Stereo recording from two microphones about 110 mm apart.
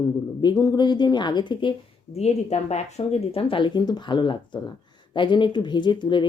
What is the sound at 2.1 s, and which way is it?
Speech, 80° left.